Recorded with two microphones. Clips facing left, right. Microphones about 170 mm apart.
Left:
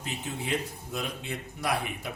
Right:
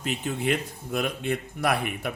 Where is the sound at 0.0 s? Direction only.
65° right (ahead or behind).